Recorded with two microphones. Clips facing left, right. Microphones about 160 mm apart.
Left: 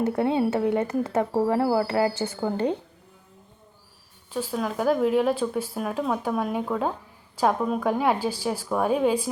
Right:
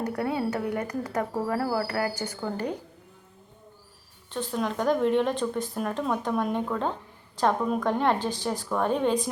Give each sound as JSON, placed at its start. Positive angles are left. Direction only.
{"t": 0.0, "sound": "speech", "side_deg": 25}
{"t": 4.3, "sound": "a woman's voice", "side_deg": 5}